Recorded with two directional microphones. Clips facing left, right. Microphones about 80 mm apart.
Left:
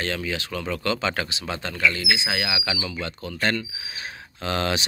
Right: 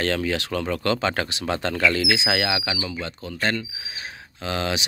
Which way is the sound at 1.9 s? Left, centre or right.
Right.